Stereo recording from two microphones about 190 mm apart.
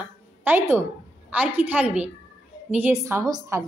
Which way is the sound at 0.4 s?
10° right (ahead or behind).